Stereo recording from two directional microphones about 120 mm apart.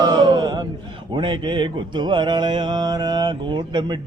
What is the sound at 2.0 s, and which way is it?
Mantra, 40° right (ahead or behind).